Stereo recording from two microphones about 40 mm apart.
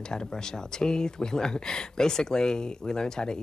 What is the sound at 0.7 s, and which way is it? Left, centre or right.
Speech, centre.